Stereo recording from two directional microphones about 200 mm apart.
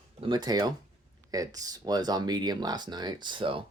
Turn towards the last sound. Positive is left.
turn(degrees=-25)  # may be behind; listen again after turning